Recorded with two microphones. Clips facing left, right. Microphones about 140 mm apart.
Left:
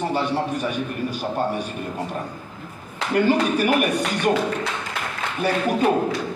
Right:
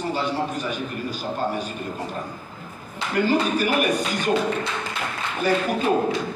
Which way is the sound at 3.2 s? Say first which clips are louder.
Left 1 dB; 65° left (ahead or behind).